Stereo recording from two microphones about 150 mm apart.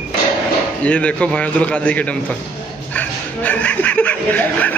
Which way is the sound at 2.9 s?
10° left (ahead or behind).